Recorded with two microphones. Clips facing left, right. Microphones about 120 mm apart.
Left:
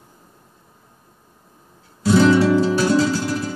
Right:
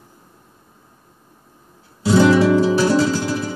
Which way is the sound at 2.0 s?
20° right (ahead or behind).